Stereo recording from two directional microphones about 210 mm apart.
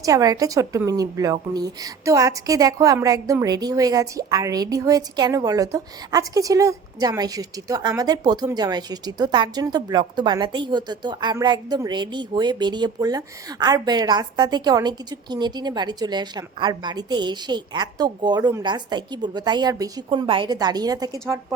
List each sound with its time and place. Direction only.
0.0 s a woman's voice: 15° right (ahead or behind)